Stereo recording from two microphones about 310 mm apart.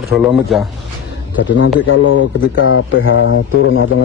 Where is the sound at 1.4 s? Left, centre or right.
Left.